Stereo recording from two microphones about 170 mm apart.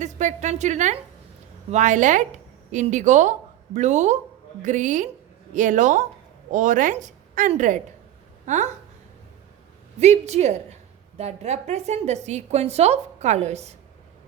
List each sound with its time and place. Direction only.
0.0 s a woman's voice: 45° right (ahead or behind)
10.0 s a woman's voice: 40° right (ahead or behind)